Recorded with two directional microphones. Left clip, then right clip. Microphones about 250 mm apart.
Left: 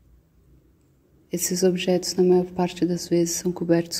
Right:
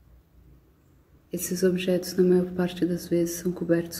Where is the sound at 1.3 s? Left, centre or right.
Left.